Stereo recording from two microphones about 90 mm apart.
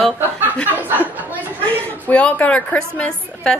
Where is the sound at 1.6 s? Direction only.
15° left (ahead or behind).